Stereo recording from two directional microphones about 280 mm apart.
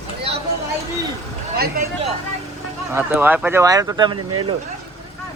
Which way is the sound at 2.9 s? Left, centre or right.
Centre.